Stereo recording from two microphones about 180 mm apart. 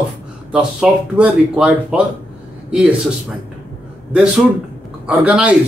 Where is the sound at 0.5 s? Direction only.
5° right (ahead or behind).